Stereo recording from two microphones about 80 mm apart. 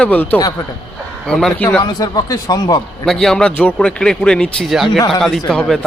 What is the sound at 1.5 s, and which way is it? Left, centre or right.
Speech, centre.